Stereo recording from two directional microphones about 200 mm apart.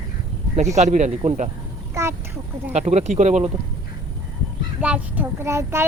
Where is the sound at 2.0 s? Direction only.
15° right (ahead or behind).